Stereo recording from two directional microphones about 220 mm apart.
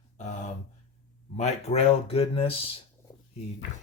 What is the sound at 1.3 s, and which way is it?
Speech, 30° left (ahead or behind).